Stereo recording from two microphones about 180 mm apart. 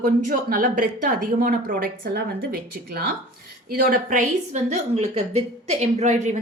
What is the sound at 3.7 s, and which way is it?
A woman's voice, 50° right (ahead or behind).